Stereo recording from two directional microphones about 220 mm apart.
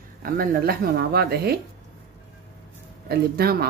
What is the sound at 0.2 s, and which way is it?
Speech, 40° right (ahead or behind).